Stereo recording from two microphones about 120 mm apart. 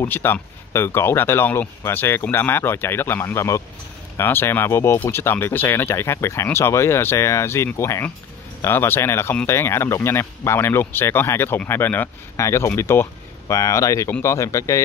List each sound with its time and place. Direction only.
0.0 s speech: 20° left (ahead or behind)